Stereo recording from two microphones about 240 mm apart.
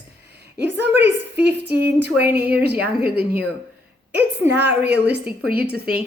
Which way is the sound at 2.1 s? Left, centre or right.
Centre.